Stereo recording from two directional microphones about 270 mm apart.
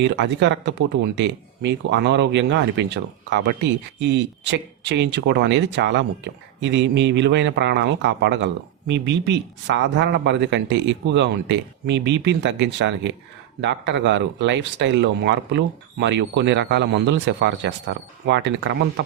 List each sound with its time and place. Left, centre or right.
0.0 s speech: right